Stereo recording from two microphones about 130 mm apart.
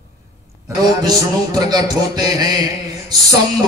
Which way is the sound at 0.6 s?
30° right (ahead or behind).